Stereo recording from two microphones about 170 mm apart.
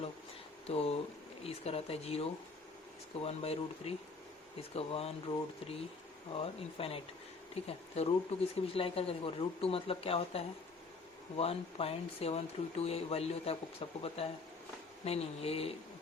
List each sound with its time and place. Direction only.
0.7 s speech: 35° left (ahead or behind)